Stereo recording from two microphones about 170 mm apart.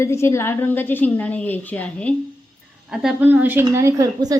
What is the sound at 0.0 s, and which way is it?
Speech, 15° left (ahead or behind).